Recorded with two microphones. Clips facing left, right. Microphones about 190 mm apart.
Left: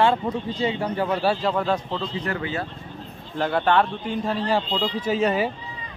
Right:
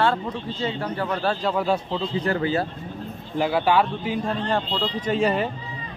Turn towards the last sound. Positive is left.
turn(degrees=0)  # may be behind; listen again after turning